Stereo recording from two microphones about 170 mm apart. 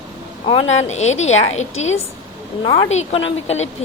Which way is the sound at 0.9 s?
40° left (ahead or behind).